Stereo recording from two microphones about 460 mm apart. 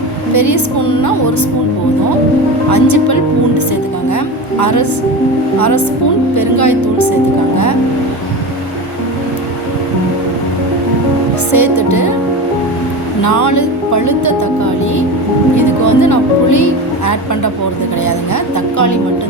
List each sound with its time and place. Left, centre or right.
0.3 s speech: left
2.6 s speech: left
4.6 s speech: left
11.5 s speech: left
13.2 s speech: left